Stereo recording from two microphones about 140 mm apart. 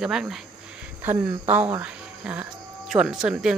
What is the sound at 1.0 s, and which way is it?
Speech, 15° right (ahead or behind).